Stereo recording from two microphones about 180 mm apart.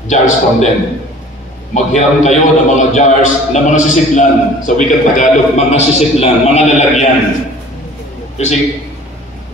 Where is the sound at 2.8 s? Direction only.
45° left (ahead or behind).